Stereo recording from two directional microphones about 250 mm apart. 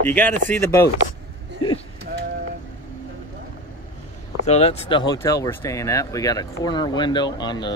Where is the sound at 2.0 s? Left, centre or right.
Right.